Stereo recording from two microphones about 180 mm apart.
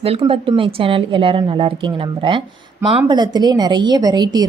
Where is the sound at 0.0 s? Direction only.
30° right (ahead or behind).